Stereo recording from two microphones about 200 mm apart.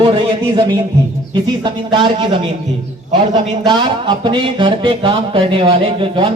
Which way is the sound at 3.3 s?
20° right (ahead or behind).